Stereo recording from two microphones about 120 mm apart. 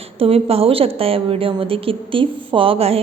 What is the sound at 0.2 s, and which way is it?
A woman's voice, 55° right (ahead or behind).